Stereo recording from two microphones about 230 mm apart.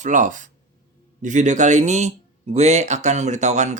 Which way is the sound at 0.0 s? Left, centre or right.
Right.